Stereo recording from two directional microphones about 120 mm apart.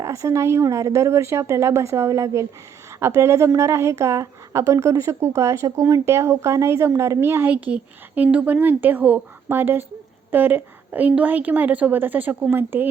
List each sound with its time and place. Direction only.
0.0 s a woman's voice: 25° right (ahead or behind)